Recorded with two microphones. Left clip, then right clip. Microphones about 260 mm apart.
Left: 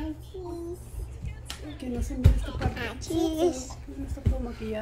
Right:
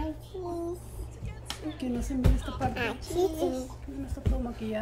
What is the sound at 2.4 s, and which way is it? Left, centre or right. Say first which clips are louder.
Music: right 3 dB; right.